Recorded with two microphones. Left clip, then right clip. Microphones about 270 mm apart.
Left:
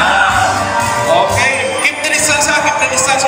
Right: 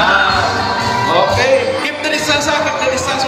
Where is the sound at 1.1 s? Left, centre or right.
Centre.